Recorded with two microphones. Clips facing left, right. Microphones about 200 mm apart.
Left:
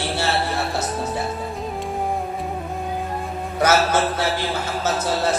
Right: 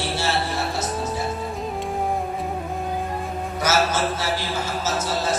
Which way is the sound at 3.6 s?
60° left (ahead or behind).